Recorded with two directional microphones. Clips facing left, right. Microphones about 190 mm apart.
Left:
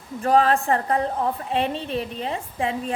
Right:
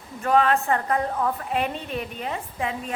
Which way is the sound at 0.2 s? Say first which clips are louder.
Left 2 dB; 35° left (ahead or behind).